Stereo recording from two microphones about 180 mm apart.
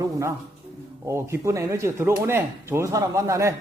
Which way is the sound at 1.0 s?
15° right (ahead or behind).